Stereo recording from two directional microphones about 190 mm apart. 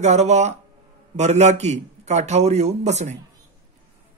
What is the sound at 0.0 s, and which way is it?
A man's voice, 35° right (ahead or behind).